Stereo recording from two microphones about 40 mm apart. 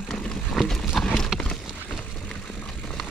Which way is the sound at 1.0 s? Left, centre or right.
Centre.